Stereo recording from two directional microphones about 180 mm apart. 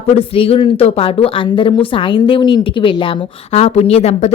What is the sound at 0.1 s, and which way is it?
Speech, 30° left (ahead or behind).